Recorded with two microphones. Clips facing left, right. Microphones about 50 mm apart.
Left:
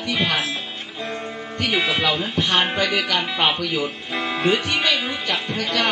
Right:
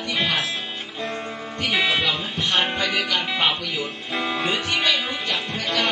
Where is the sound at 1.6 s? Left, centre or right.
Centre.